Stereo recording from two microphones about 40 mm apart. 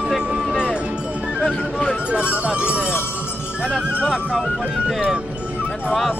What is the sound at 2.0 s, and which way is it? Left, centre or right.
Music, right.